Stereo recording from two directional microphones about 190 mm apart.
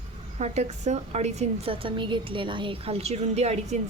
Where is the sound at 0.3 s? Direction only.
35° right (ahead or behind).